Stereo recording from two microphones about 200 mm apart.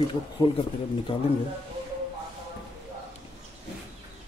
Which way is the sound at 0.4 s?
25° left (ahead or behind).